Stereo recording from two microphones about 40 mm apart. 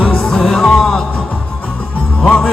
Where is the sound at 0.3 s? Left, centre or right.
Centre.